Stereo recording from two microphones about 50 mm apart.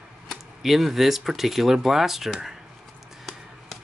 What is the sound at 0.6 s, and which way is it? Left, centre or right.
Speech, centre.